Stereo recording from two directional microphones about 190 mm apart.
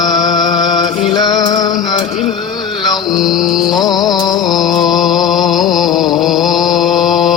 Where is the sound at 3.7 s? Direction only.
20° left (ahead or behind).